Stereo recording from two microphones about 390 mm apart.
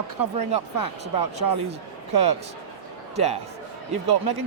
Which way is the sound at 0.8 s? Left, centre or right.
Right.